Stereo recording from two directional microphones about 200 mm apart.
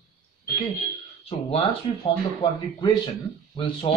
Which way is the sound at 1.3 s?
25° left (ahead or behind).